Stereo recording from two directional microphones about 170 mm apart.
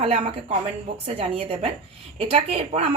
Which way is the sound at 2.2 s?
35° right (ahead or behind).